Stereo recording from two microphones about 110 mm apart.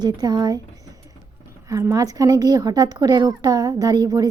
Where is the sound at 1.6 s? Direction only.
30° right (ahead or behind).